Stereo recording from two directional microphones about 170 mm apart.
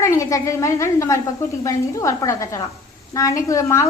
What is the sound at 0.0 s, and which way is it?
A woman's voice, 20° left (ahead or behind).